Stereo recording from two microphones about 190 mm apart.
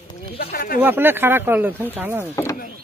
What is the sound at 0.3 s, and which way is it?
Speech, 55° left (ahead or behind).